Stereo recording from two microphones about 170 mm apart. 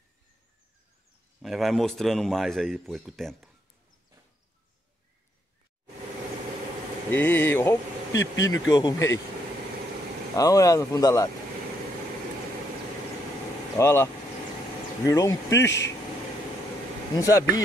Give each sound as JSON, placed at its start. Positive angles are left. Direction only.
{"t": 1.4, "sound": "a man's voice", "side_deg": 0}
{"t": 7.1, "sound": "speech", "side_deg": 15}
{"t": 10.3, "sound": "speech", "side_deg": 20}
{"t": 13.7, "sound": "speech", "side_deg": 15}
{"t": 15.6, "sound": "speech", "side_deg": 90}
{"t": 17.2, "sound": "speech", "side_deg": 20}